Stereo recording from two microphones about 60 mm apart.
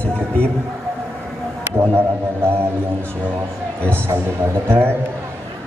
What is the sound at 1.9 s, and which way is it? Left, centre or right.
Speech, right.